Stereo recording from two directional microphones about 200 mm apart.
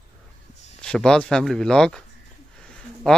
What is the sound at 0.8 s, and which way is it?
Speech, 5° left (ahead or behind).